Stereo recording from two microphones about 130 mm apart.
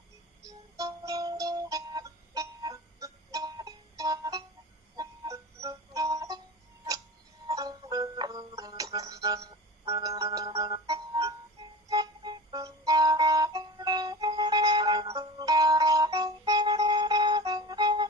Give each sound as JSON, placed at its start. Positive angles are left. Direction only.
{"t": 0.4, "sound": "music", "side_deg": -30}
{"t": 7.4, "sound": "music", "side_deg": -30}